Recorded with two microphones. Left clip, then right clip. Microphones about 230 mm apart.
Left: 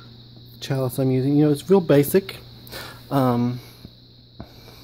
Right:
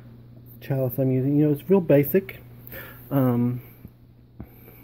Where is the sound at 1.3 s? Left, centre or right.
Left.